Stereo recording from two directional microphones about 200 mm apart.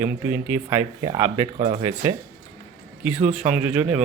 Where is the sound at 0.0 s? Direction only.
10° right (ahead or behind).